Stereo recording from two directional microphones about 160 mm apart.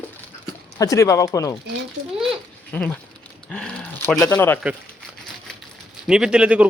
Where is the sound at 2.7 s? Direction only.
10° left (ahead or behind).